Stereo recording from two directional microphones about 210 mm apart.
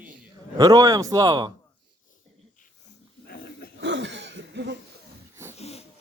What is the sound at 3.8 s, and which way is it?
Cough, 55° right (ahead or behind).